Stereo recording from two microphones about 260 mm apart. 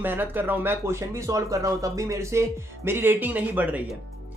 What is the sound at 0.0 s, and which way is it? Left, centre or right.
Speech, centre.